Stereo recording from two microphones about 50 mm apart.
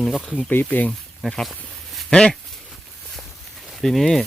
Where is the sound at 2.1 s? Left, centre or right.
Centre.